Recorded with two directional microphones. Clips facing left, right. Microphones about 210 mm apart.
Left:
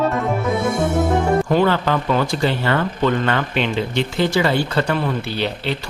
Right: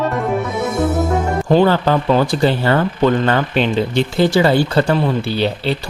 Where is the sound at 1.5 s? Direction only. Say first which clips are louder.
Right 4 dB; 30° right (ahead or behind).